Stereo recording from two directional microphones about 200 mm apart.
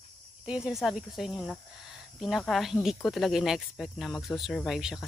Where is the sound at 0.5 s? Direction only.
5° right (ahead or behind).